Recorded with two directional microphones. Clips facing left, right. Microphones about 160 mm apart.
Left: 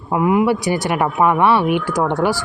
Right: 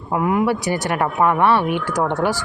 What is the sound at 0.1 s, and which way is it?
Speech, 10° left (ahead or behind).